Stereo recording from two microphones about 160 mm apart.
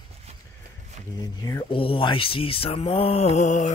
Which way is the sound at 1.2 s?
20° left (ahead or behind).